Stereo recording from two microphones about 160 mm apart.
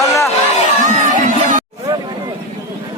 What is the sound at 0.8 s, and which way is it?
Music, 55° right (ahead or behind).